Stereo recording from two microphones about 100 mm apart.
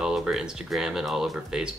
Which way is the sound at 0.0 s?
5° right (ahead or behind).